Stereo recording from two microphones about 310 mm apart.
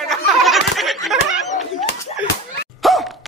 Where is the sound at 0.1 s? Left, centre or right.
Centre.